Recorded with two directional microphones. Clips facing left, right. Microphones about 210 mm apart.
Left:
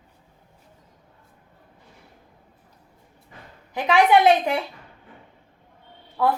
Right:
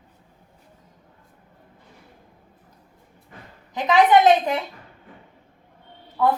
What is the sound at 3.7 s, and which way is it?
Speech, 10° left (ahead or behind).